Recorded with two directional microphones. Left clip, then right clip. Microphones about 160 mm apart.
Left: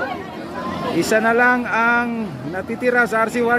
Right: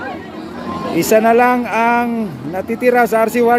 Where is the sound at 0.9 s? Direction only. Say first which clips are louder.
Right 5 dB; 25° right (ahead or behind).